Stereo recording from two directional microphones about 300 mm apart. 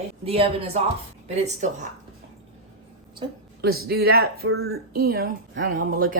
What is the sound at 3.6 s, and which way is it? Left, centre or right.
Speech, right.